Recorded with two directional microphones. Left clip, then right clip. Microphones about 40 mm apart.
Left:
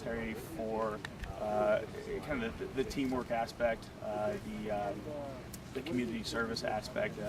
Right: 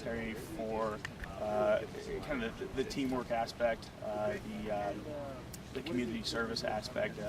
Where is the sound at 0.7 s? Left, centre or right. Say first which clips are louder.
Even; centre.